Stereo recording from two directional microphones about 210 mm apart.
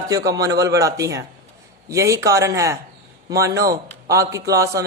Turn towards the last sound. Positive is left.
turn(degrees=-15)  # may be behind; listen again after turning